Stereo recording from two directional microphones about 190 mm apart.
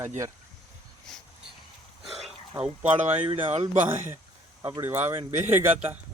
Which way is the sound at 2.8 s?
30° right (ahead or behind).